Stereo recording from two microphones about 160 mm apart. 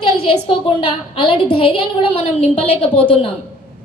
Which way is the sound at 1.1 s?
30° left (ahead or behind).